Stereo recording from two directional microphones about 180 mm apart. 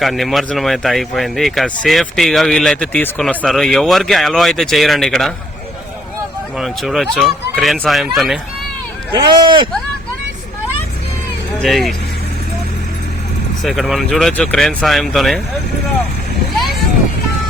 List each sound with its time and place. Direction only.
0.0 s speech: centre (ahead or behind)
6.6 s speech: centre (ahead or behind)
9.1 s speech: 25° right (ahead or behind)
11.6 s speech: centre (ahead or behind)
13.6 s speech: centre (ahead or behind)